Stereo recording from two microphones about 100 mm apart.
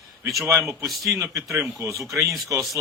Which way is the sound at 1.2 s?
30° right (ahead or behind).